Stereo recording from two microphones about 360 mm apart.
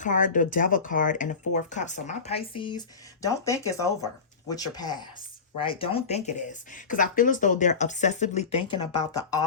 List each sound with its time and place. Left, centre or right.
0.0 s speech: left